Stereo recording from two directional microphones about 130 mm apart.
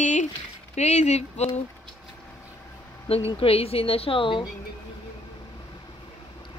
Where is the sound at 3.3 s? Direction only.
45° left (ahead or behind).